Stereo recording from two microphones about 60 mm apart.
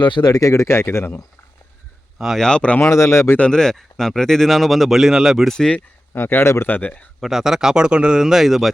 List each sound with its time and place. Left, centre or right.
0.3 s speech: left
2.1 s speech: centre
2.4 s speech: centre
2.8 s speech: left
3.3 s speech: centre
5.5 s speech: centre
6.1 s speech: left
6.7 s speech: left
7.2 s speech: centre